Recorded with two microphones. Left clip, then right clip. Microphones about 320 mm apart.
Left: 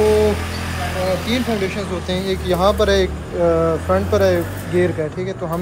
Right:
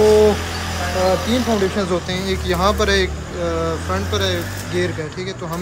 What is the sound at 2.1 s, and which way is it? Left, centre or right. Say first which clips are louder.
Speech: left 1 dB; centre.